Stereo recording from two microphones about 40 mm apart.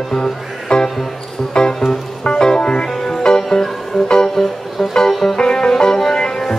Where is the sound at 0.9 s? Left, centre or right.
Centre.